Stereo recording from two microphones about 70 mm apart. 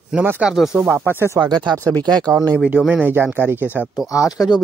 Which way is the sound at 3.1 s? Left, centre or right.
Right.